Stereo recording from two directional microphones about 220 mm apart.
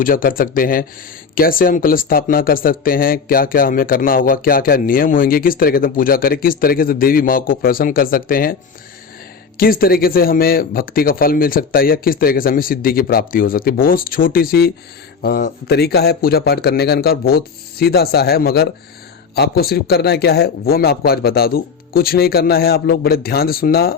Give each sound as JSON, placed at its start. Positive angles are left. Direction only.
{"t": 0.0, "sound": "speech", "side_deg": 40}
{"t": 9.6, "sound": "speech", "side_deg": 40}